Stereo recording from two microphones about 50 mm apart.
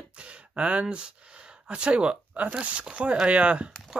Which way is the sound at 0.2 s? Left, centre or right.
Right.